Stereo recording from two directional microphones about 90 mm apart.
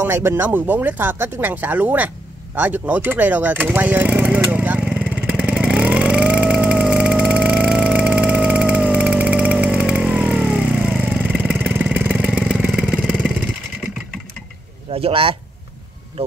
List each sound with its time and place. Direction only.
0.0 s speech: 30° right (ahead or behind)
4.7 s vehicle: 5° right (ahead or behind)
14.9 s speech: 90° right